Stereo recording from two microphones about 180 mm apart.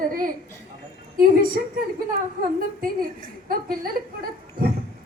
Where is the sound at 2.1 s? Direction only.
55° right (ahead or behind).